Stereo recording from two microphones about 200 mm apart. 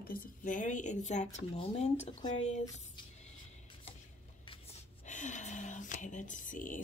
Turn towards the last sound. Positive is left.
turn(degrees=40)  # may be behind; listen again after turning